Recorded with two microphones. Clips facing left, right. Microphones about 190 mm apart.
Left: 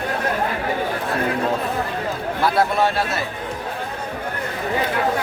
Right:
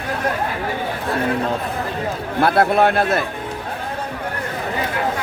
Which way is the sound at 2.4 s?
55° right (ahead or behind).